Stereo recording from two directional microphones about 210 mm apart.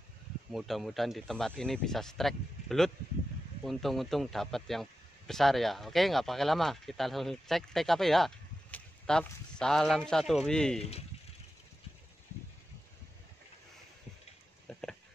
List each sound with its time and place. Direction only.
0.5 s speech: centre (ahead or behind)
10.8 s speech: 30° left (ahead or behind)
14.7 s a sound: 5° left (ahead or behind)